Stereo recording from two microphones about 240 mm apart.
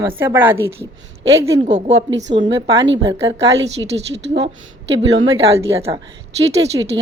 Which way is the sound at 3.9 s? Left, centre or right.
Right.